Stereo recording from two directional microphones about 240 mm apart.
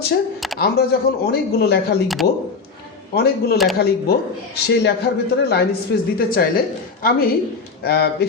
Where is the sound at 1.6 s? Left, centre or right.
Left.